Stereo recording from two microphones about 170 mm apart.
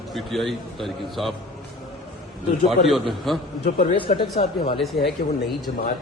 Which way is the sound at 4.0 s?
35° left (ahead or behind).